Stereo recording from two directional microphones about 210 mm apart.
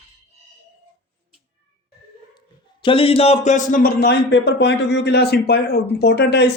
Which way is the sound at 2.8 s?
25° left (ahead or behind).